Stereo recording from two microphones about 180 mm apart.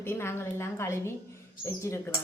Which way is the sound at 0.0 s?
15° left (ahead or behind).